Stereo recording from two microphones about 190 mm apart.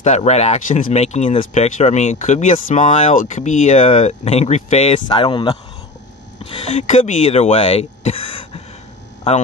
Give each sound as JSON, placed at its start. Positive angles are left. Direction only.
{"t": 0.0, "sound": "speech", "side_deg": 35}